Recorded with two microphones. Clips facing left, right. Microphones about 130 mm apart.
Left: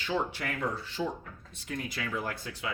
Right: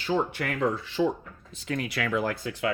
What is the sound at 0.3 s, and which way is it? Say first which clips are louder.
Speech: right 6 dB; 60° right (ahead or behind).